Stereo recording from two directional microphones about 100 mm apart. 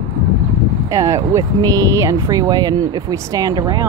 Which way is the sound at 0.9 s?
35° right (ahead or behind).